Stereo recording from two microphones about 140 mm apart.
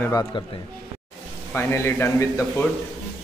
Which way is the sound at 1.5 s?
15° left (ahead or behind).